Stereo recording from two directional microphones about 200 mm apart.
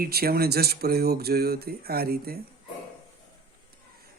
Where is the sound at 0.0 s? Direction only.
50° right (ahead or behind).